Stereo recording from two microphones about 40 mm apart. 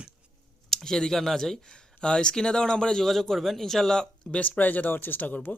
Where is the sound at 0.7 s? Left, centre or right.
Centre.